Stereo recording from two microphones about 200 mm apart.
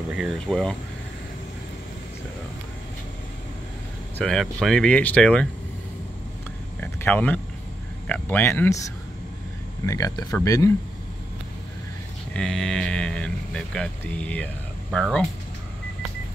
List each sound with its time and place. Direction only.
0.1 s speech: centre (ahead or behind)
4.2 s speech: 5° left (ahead or behind)
6.8 s speech: 10° left (ahead or behind)
9.8 s speech: 15° left (ahead or behind)
12.4 s speech: 5° left (ahead or behind)